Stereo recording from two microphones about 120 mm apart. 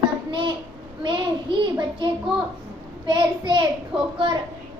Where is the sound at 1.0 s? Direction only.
40° right (ahead or behind).